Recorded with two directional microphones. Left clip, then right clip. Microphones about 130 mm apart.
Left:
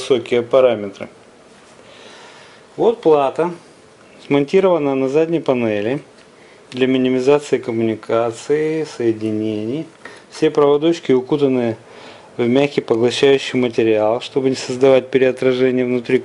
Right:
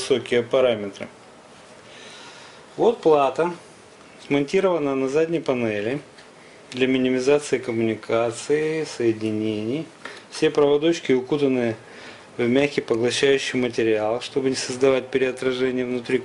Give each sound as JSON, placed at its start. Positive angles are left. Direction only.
{"t": 0.0, "sound": "speech", "side_deg": 15}
{"t": 2.8, "sound": "speech", "side_deg": 10}